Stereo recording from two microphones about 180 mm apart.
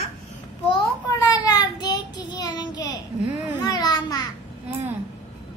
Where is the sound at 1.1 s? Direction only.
20° left (ahead or behind).